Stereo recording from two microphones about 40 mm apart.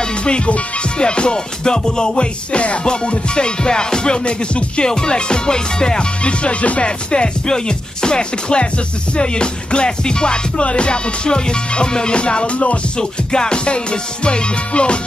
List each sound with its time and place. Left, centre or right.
0.2 s music: left
7.1 s music: left